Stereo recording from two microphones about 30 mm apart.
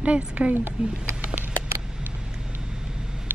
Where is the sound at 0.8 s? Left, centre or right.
Right.